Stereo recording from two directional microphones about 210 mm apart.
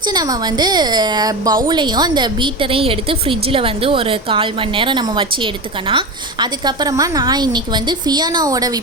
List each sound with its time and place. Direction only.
0.1 s a woman's voice: 20° right (ahead or behind)